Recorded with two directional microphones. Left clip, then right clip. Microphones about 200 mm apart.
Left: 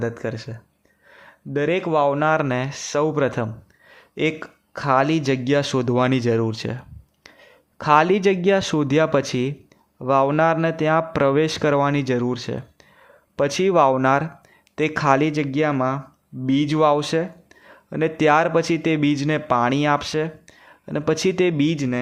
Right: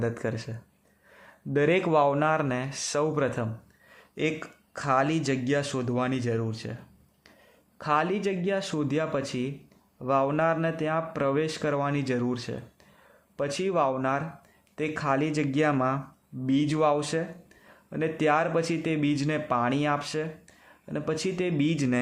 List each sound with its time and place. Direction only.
0.0 s speech: 10° left (ahead or behind); by 6.7 s 30° left (ahead or behind)
7.8 s speech: 25° left (ahead or behind)